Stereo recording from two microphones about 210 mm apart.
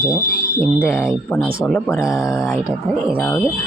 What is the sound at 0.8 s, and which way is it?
Speech, 10° left (ahead or behind).